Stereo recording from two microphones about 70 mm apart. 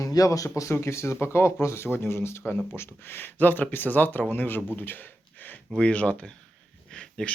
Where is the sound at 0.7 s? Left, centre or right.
Left.